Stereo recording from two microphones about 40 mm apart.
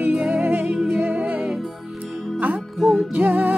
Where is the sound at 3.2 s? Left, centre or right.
Right.